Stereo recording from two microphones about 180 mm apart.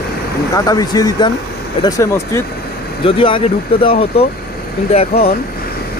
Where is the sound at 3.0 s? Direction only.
30° left (ahead or behind).